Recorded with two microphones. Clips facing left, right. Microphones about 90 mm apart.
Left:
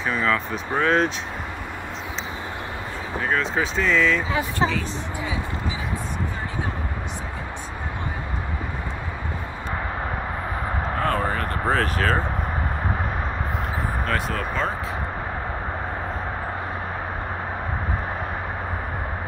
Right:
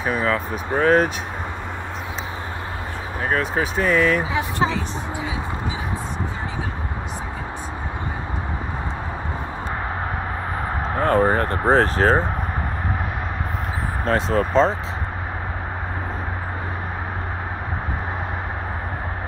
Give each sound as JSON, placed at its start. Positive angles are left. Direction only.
{"t": 0.1, "sound": "speech", "side_deg": -15}
{"t": 0.5, "sound": "speech", "side_deg": -45}
{"t": 3.3, "sound": "speech", "side_deg": -50}
{"t": 11.0, "sound": "speech", "side_deg": -35}
{"t": 14.0, "sound": "speech", "side_deg": -25}